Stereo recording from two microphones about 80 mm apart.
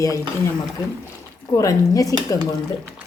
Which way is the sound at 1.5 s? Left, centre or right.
Left.